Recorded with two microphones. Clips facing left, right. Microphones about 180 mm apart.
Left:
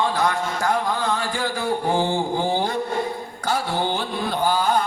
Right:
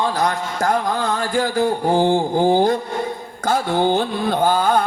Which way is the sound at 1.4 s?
40° right (ahead or behind).